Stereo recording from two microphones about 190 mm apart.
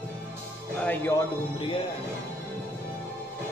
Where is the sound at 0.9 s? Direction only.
15° left (ahead or behind).